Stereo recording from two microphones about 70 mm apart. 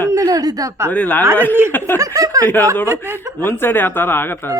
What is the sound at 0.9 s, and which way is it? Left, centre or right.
Speech, left.